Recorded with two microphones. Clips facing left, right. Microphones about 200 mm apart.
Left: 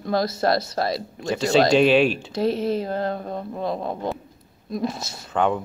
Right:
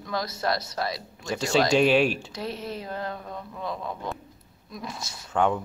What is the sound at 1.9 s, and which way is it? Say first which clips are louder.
Speech: left 4 dB; 10° right (ahead or behind).